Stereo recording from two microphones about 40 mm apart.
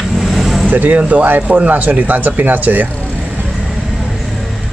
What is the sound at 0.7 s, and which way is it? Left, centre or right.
Speech, right.